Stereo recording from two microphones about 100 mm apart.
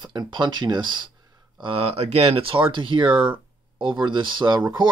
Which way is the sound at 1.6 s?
70° right (ahead or behind).